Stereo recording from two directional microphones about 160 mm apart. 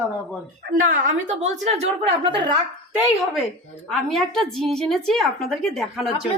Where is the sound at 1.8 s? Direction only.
30° right (ahead or behind).